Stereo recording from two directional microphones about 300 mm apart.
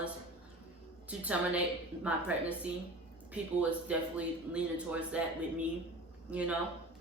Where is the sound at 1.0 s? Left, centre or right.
Centre.